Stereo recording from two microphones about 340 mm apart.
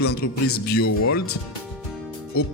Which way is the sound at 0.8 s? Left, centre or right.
Left.